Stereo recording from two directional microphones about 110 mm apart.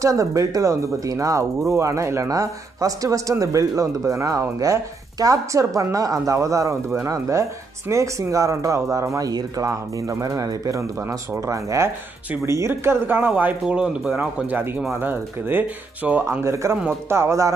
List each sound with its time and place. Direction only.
0.0 s speech: 30° right (ahead or behind)